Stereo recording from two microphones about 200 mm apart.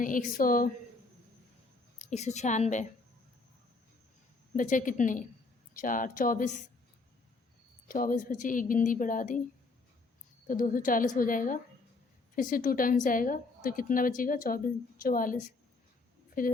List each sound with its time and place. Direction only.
0.0 s a woman's voice: 40° left (ahead or behind)
2.0 s speech: 35° left (ahead or behind)
4.5 s speech: 40° left (ahead or behind)
7.9 s speech: 45° left (ahead or behind)
10.4 s a woman's voice: 45° left (ahead or behind)